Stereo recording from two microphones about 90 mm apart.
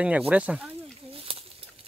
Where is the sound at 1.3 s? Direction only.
90° right.